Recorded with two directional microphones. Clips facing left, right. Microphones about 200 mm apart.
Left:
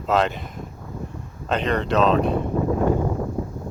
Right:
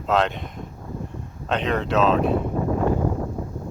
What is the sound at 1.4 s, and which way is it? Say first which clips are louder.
Speech: left 1 dB; centre (ahead or behind).